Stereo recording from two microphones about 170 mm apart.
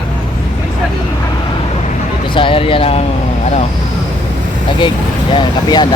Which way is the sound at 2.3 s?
30° left (ahead or behind).